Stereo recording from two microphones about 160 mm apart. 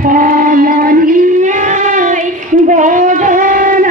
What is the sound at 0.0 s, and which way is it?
Child singing, 60° right (ahead or behind).